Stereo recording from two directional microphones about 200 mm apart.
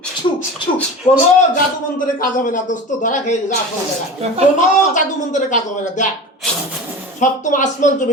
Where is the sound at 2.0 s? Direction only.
45° left (ahead or behind).